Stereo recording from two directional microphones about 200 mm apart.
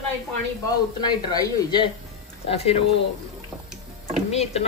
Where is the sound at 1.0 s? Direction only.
20° left (ahead or behind).